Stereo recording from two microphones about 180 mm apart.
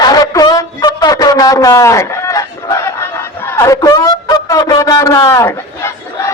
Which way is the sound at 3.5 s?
15° left (ahead or behind).